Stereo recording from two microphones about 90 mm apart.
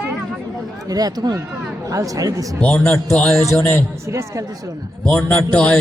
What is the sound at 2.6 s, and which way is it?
Speech, 10° left (ahead or behind).